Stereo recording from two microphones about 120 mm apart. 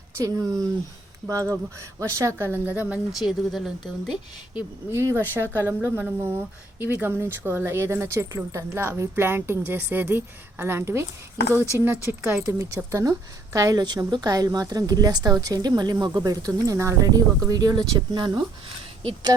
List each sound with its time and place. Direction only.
0.2 s a woman's voice: 30° right (ahead or behind)
3.2 s speech: centre (ahead or behind)
4.9 s a woman's voice: 25° right (ahead or behind)